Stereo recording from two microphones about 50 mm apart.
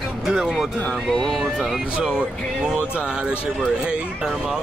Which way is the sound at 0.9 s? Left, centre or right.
Centre.